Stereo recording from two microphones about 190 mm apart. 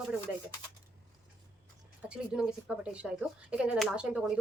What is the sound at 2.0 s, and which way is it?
A woman's voice, 5° right (ahead or behind).